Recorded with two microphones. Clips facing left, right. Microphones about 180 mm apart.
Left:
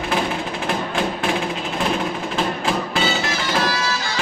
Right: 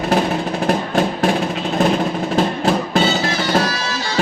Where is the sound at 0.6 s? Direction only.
40° right (ahead or behind).